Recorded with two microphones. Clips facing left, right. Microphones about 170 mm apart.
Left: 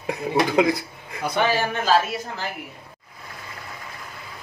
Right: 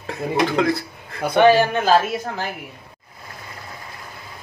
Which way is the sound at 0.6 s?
15° left (ahead or behind).